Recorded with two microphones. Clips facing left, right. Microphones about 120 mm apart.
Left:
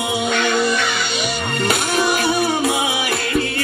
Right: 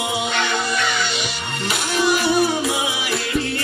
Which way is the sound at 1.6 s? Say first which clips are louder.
Left 1 dB; 55° left (ahead or behind).